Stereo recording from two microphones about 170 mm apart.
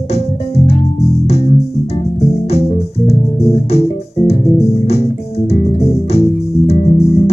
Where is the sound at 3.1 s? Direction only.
35° left (ahead or behind).